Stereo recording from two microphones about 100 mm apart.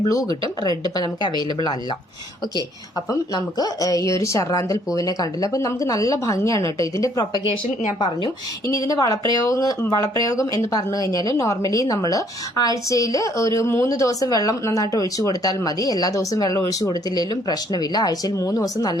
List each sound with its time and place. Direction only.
0.1 s a woman's voice: 40° left (ahead or behind)
3.1 s speech: 35° left (ahead or behind)
7.9 s a woman's voice: 50° left (ahead or behind)
8.6 s speech: 35° left (ahead or behind)